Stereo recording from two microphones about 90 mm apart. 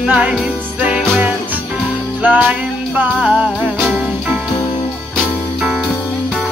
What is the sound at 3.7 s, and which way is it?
Music, 5° left (ahead or behind).